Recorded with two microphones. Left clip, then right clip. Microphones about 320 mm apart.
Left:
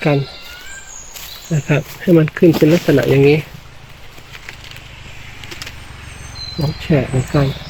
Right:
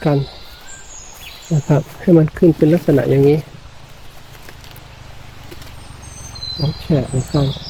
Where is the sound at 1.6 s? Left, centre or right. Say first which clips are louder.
Even; centre.